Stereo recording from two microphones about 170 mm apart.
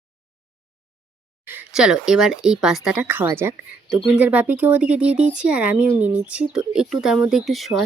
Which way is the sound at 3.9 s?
5° right (ahead or behind).